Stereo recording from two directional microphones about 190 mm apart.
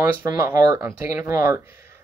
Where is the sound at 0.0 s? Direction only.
15° right (ahead or behind).